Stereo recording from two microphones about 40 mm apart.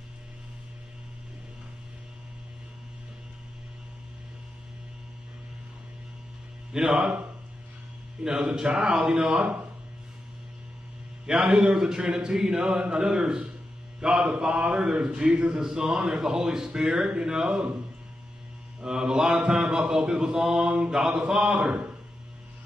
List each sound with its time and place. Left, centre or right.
6.7 s a man's voice: centre
8.2 s a man's voice: centre
11.2 s a man's voice: centre
15.7 s a man's voice: centre
18.8 s a man's voice: centre